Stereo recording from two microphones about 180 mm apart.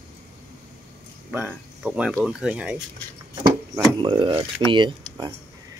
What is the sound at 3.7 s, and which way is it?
Speech, 25° right (ahead or behind).